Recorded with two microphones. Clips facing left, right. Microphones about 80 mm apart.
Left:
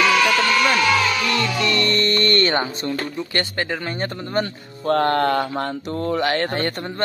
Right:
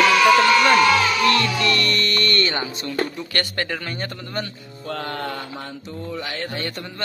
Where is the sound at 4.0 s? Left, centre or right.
Left.